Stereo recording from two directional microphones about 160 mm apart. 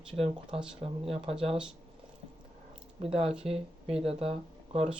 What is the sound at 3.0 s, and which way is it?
Speech, 40° right (ahead or behind).